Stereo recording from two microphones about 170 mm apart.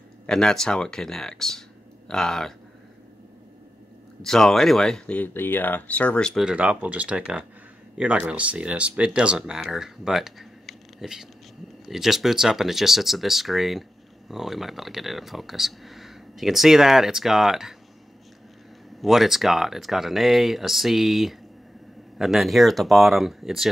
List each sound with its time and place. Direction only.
0.3 s speech: 5° left (ahead or behind)
4.2 s speech: centre (ahead or behind)
18.9 s speech: centre (ahead or behind)